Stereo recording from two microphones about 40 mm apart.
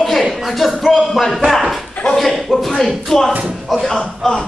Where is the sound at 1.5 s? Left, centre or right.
Centre.